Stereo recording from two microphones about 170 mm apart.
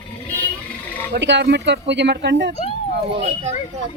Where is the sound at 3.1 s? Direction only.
40° right (ahead or behind).